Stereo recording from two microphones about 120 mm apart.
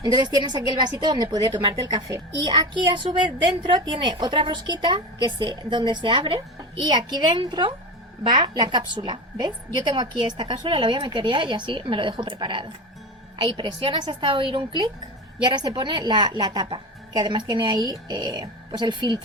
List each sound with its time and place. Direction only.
0.0 s a woman's voice: 35° right (ahead or behind)